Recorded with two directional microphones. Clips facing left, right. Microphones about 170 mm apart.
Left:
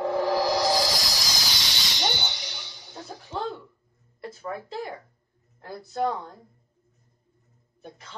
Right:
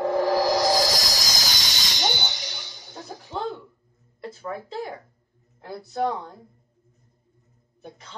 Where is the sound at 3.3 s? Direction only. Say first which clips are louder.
Right 1 dB; centre (ahead or behind).